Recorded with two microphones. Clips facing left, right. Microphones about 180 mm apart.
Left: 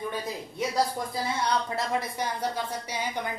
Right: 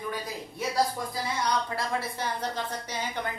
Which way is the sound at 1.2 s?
25° left (ahead or behind).